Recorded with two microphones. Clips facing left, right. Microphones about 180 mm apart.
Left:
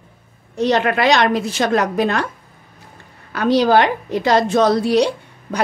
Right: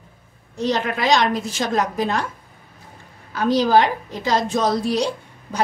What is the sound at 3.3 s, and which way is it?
A woman's voice, 70° left (ahead or behind).